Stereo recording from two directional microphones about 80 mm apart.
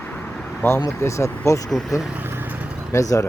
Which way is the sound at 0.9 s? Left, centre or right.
Left.